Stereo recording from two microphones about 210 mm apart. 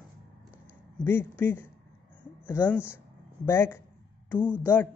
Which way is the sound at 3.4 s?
10° left (ahead or behind).